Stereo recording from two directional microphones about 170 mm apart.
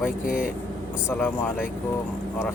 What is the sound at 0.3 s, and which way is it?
Speech, 60° left (ahead or behind).